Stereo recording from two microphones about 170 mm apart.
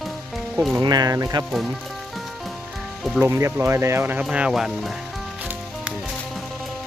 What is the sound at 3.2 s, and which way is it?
Speech, 15° right (ahead or behind).